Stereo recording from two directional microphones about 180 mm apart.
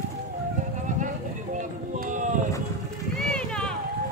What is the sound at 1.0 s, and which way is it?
Run, 45° right (ahead or behind).